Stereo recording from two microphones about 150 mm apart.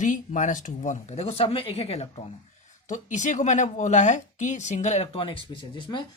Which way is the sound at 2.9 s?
55° left (ahead or behind).